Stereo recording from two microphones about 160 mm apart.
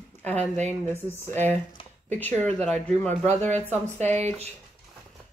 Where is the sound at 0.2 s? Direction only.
10° left (ahead or behind).